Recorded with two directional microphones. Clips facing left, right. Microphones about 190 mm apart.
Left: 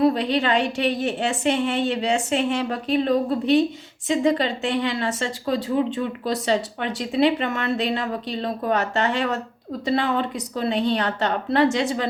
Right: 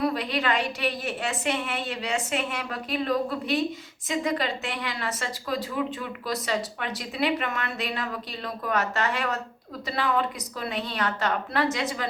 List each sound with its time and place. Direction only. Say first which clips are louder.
0.0 s speech: left 7 dB; 25° left (ahead or behind)